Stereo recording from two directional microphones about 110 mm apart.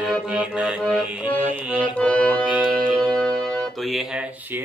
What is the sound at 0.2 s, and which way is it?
Accordion, 10° right (ahead or behind).